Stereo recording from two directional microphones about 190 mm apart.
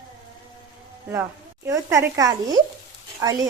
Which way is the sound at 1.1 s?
15° right (ahead or behind).